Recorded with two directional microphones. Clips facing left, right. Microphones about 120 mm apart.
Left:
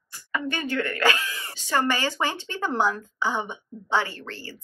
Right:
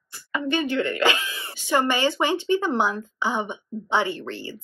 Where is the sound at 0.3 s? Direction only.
20° right (ahead or behind).